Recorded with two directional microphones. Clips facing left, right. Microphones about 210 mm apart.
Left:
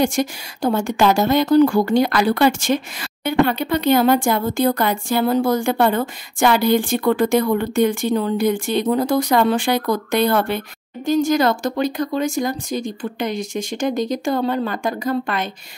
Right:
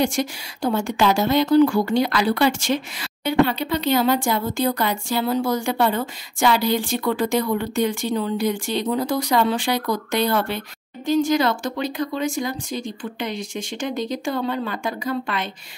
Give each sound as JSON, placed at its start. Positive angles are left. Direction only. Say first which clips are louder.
{"t": 0.0, "sound": "speech", "louder": "left 3 dB", "side_deg": 45}